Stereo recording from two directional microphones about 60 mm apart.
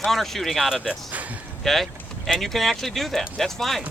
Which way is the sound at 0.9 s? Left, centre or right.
Right.